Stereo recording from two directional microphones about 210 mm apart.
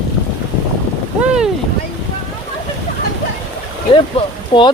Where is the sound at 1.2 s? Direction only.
5° right (ahead or behind).